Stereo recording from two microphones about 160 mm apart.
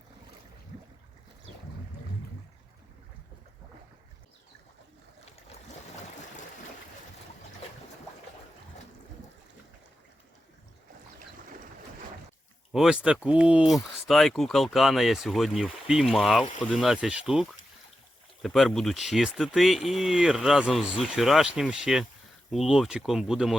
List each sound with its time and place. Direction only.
12.7 s speech: 5° right (ahead or behind)